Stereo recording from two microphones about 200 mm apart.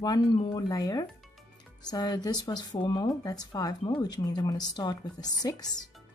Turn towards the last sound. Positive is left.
turn(degrees=20)  # may be behind; listen again after turning